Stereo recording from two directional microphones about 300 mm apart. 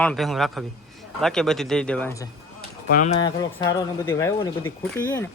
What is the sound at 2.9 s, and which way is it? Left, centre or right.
Speech, left.